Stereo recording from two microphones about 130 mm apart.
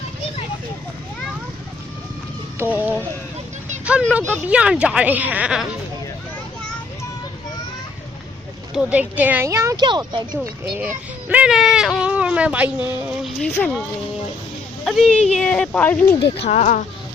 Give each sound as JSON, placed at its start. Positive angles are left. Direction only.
{"t": 2.6, "sound": "speech", "side_deg": -15}
{"t": 8.7, "sound": "speech", "side_deg": -10}
{"t": 9.7, "sound": "speech", "side_deg": -35}
{"t": 10.4, "sound": "speech", "side_deg": -15}
{"t": 13.2, "sound": "speech", "side_deg": 10}
{"t": 14.8, "sound": "speech", "side_deg": 5}
{"t": 16.4, "sound": "speech", "side_deg": 60}